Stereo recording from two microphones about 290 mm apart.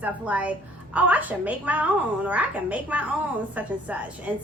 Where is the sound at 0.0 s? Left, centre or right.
Centre.